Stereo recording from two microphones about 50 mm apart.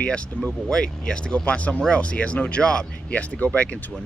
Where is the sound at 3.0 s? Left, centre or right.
Left.